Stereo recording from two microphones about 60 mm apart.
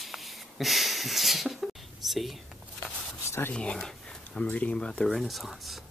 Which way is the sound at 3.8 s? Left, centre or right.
Centre.